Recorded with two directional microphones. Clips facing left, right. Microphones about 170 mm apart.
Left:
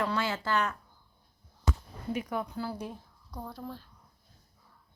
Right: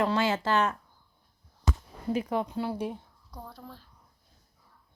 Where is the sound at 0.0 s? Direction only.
25° right (ahead or behind).